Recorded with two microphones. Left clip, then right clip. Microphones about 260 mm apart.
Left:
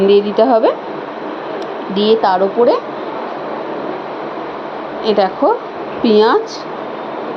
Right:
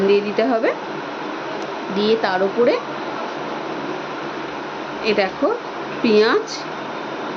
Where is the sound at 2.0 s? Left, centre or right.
Centre.